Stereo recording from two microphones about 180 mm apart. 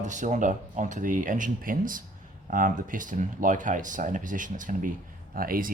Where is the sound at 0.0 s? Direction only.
45° right (ahead or behind).